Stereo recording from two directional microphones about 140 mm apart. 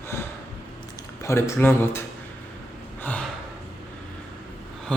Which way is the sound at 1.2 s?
20° left (ahead or behind).